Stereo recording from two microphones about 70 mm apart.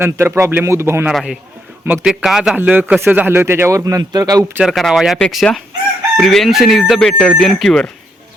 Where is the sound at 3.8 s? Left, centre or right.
Right.